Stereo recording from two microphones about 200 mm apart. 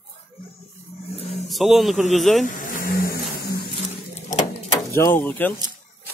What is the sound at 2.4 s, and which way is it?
Vehicle, 45° left (ahead or behind).